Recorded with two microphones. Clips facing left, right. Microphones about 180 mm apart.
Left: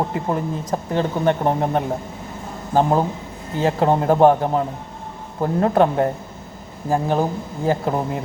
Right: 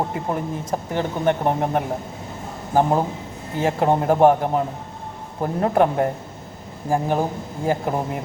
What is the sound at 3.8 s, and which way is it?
Speech, 15° right (ahead or behind).